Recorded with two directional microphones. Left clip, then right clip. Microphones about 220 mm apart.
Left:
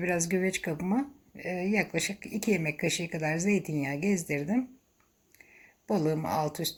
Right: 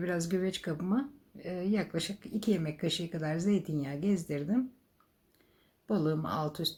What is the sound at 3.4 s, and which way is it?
Speech, 55° left (ahead or behind).